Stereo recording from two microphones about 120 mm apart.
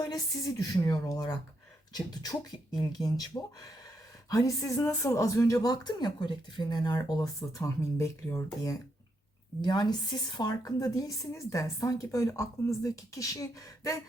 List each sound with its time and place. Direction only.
0.0 s a woman's voice: 30° left (ahead or behind)
4.3 s a woman's voice: 30° left (ahead or behind)